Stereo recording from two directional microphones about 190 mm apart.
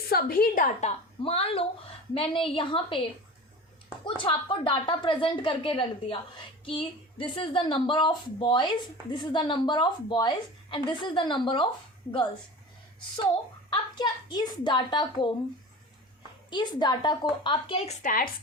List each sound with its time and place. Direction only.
0.1 s a woman's voice: 50° left (ahead or behind); by 11.7 s 25° left (ahead or behind)
13.7 s a woman's voice: 20° left (ahead or behind)
16.5 s a woman's voice: 25° left (ahead or behind); by 18.3 s 45° left (ahead or behind)